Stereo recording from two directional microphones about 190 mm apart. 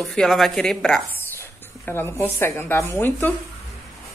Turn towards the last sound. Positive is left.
turn(degrees=10)  # may be behind; listen again after turning